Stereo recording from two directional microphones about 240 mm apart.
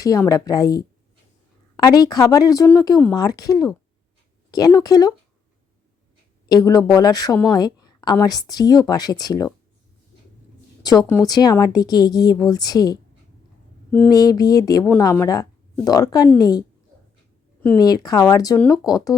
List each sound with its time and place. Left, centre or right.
0.0 s speech: centre
6.5 s speech: centre
10.8 s speech: centre